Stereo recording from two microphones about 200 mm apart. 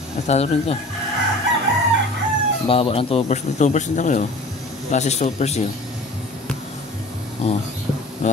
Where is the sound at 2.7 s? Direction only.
30° left (ahead or behind).